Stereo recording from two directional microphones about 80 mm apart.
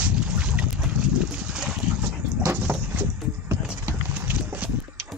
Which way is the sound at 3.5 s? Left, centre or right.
Right.